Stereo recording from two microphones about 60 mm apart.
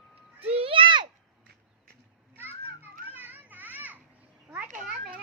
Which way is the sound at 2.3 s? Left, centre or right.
Right.